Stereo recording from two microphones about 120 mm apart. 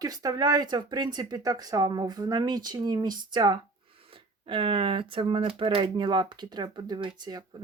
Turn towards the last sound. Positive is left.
turn(degrees=-35)  # may be behind; listen again after turning